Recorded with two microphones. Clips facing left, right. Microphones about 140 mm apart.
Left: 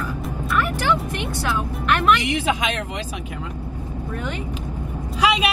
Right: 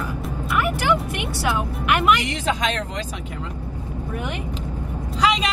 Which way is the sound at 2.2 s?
15° left (ahead or behind).